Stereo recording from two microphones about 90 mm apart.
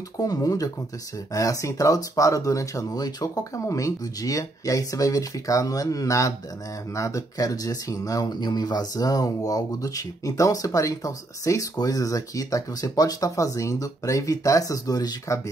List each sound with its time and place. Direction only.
0.2 s speech: 40° left (ahead or behind)